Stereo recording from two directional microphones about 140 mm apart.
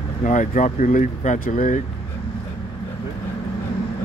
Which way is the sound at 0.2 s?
65° left (ahead or behind).